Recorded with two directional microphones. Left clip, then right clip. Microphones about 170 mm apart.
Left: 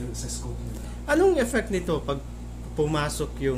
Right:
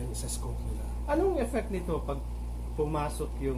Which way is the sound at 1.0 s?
50° left (ahead or behind).